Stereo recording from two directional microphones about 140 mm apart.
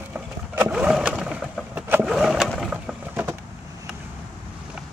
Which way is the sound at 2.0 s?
Centre (ahead or behind).